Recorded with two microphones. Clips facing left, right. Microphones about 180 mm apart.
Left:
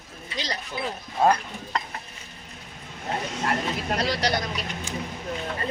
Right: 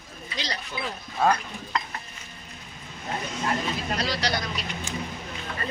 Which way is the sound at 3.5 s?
55° left (ahead or behind).